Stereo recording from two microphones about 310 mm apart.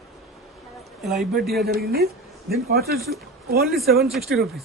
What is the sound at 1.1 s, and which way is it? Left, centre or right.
Speech, centre.